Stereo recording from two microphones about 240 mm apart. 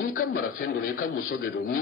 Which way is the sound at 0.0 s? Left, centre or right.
Left.